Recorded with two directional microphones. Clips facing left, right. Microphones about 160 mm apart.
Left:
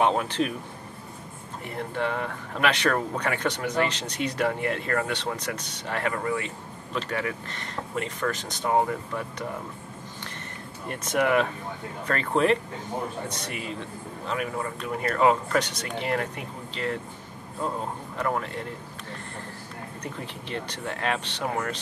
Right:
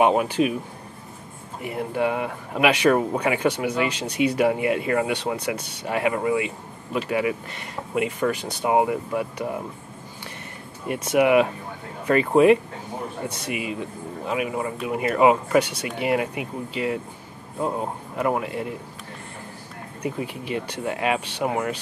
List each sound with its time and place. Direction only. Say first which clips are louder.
0.0 s speech: right 5 dB; 10° right (ahead or behind)
1.6 s speech: right 5 dB; 10° right (ahead or behind)
10.9 s speech: right 6 dB; 10° right (ahead or behind)
20.0 s speech: right 10 dB; 10° right (ahead or behind)